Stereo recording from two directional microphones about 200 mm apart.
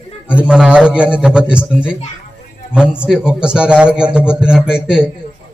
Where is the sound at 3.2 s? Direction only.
5° right (ahead or behind).